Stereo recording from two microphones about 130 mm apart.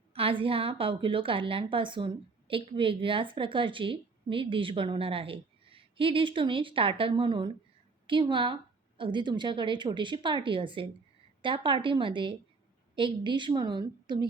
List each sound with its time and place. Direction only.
0.1 s a woman's voice: 45° right (ahead or behind)